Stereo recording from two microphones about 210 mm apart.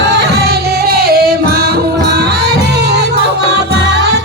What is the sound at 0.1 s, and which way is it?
Music, 50° right (ahead or behind).